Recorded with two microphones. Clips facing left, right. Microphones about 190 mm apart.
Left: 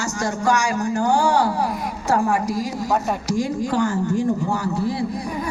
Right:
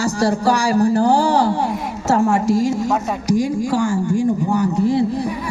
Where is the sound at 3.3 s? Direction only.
10° right (ahead or behind).